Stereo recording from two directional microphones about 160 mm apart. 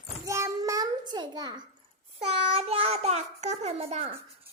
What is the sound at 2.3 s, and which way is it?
A child's voice, 40° right (ahead or behind).